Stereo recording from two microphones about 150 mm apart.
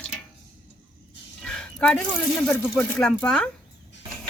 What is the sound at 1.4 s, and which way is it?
Speech, 5° left (ahead or behind).